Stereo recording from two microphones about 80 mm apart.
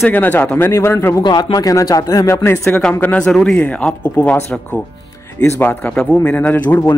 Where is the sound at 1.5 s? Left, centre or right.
Left.